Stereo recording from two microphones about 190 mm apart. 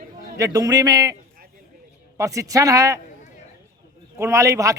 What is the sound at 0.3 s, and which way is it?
Speech, 20° right (ahead or behind).